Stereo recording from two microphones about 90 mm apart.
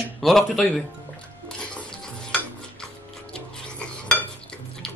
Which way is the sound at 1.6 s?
10° left (ahead or behind).